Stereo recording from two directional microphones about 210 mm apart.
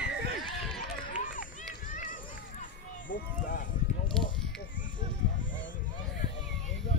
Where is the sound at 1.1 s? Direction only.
40° left (ahead or behind).